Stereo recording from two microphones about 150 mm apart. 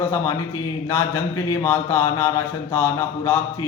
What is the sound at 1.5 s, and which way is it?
A man's voice, 20° left (ahead or behind).